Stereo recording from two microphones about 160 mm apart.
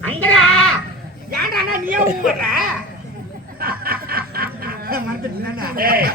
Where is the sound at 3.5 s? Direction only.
70° right (ahead or behind).